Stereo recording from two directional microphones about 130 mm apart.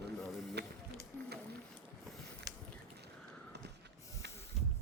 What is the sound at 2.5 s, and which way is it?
Biting, 30° right (ahead or behind).